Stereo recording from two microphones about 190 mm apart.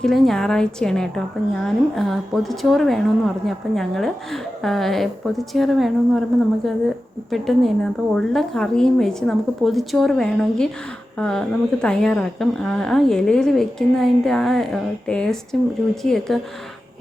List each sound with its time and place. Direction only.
0.0 s a woman's voice: centre (ahead or behind)
7.3 s a woman's voice: centre (ahead or behind)